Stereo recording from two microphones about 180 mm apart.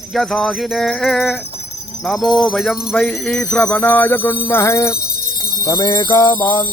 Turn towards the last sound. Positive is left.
turn(degrees=25)  # may be behind; listen again after turning